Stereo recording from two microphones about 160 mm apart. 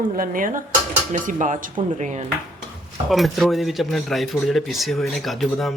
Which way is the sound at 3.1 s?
Centre (ahead or behind).